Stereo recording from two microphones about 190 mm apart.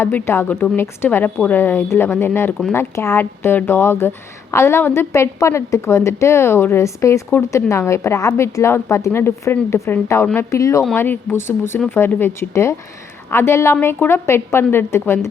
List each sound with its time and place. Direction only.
0.0 s a woman's voice: 15° left (ahead or behind)